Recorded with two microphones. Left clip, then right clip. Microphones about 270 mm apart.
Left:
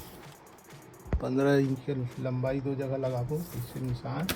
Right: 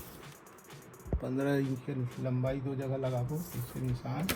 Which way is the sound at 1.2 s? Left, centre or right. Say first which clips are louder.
Left 7 dB; left.